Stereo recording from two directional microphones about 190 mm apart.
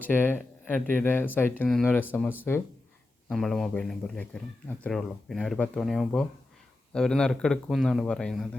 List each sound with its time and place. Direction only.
0.0 s a man's voice: 10° left (ahead or behind)